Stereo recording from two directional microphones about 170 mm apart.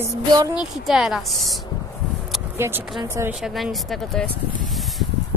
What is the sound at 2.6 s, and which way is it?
Speech, 15° right (ahead or behind).